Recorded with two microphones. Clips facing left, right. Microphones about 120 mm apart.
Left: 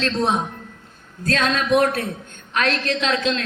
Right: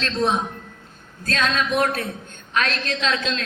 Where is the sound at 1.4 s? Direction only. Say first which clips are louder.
Left 3 dB; 45° left (ahead or behind).